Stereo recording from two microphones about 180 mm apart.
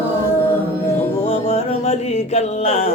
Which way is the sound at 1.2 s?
35° left (ahead or behind).